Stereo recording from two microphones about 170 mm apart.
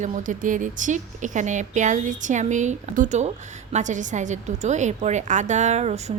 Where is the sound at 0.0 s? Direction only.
50° right (ahead or behind).